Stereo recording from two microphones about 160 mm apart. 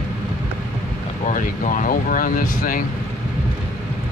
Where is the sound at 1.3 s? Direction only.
55° left (ahead or behind).